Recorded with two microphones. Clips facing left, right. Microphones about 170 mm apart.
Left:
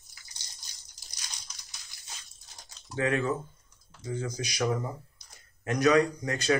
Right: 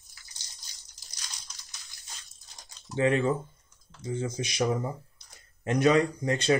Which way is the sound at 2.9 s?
25° right (ahead or behind).